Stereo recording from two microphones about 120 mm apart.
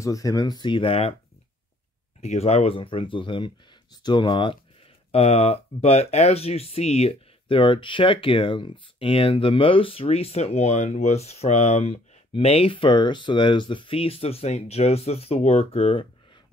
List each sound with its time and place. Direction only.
0.0 s speech: 30° left (ahead or behind); by 1.1 s 55° left (ahead or behind)
2.2 s speech: 65° left (ahead or behind); by 4.6 s 45° left (ahead or behind)
5.1 s speech: 55° left (ahead or behind)